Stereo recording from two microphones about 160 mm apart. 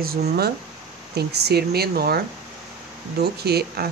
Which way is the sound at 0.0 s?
75° right (ahead or behind).